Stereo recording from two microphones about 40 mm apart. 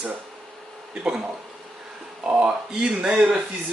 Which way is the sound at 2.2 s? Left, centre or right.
Right.